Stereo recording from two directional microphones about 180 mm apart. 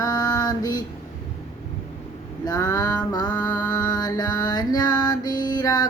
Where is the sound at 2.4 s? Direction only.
20° left (ahead or behind).